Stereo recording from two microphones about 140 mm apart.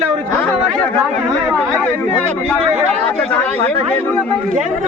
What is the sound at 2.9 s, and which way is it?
Speech, 10° left (ahead or behind).